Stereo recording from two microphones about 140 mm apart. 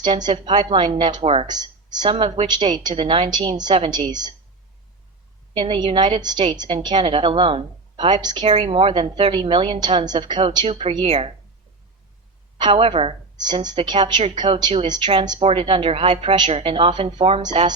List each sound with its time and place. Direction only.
0.0 s a woman's voice: 30° right (ahead or behind)
1.5 s a woman's voice: 30° right (ahead or behind)
5.5 s a woman's voice: 40° right (ahead or behind)
8.4 s a woman's voice: 45° right (ahead or behind)
12.5 s a woman's voice: 35° right (ahead or behind)
15.4 s a woman's voice: 40° right (ahead or behind)